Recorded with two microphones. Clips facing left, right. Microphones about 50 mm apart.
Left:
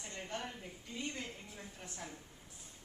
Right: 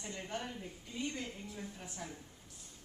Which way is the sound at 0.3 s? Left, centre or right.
Centre.